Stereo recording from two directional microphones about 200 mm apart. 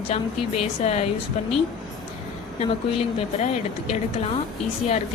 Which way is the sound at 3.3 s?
35° left (ahead or behind).